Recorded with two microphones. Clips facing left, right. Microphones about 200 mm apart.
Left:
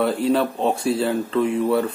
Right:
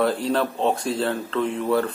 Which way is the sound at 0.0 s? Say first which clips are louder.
Left 2 dB; 5° left (ahead or behind).